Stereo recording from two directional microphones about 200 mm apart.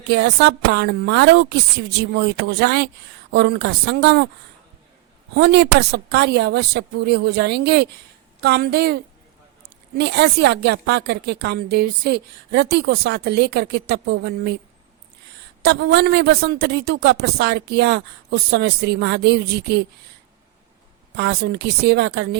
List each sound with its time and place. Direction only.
0.1 s speech: 55° right (ahead or behind)
5.3 s speech: 55° right (ahead or behind)
15.6 s speech: 60° right (ahead or behind)
21.2 s speech: 55° right (ahead or behind)